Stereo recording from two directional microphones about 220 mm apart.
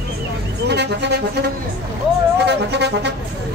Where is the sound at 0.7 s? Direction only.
50° right (ahead or behind).